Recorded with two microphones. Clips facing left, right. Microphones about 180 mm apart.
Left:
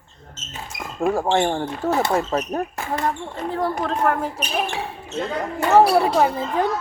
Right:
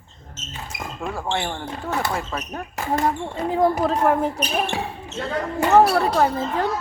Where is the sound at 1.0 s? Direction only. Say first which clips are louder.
Left 8 dB; 45° left (ahead or behind).